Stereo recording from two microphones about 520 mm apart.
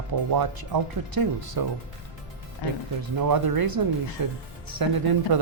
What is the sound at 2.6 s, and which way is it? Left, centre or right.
Speech, left.